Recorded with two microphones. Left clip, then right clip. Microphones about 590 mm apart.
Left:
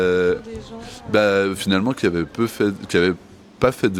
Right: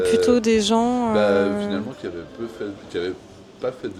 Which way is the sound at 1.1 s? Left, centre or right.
Left.